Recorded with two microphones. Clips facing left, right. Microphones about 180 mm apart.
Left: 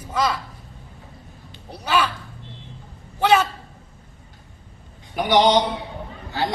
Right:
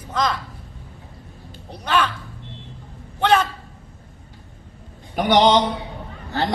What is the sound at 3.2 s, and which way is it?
Speech, 10° left (ahead or behind).